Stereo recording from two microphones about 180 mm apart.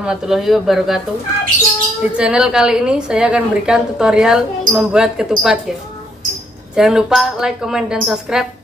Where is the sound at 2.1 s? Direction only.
5° right (ahead or behind).